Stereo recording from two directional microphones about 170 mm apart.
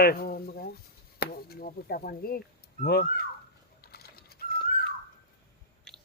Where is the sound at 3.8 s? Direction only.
65° left (ahead or behind).